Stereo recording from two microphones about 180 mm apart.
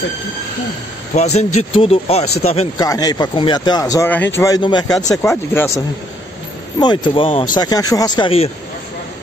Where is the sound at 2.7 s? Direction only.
20° left (ahead or behind).